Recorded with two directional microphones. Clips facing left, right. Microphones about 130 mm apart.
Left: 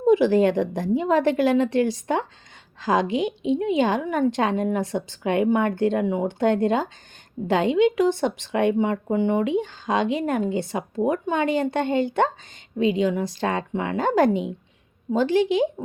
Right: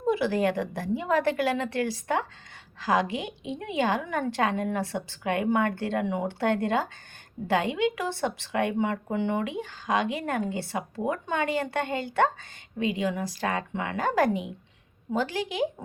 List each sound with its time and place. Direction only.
0.0 s speech: 20° left (ahead or behind)